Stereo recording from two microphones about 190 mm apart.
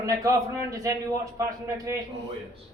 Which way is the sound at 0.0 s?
20° right (ahead or behind).